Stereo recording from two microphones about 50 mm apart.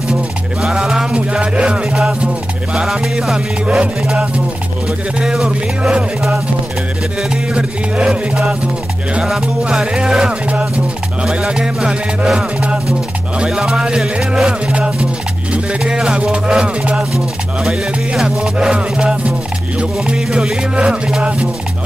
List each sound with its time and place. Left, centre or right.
0.6 s music: centre
3.6 s music: right
5.2 s music: centre
7.5 s music: right
9.2 s music: centre
14.7 s music: right
18.2 s music: centre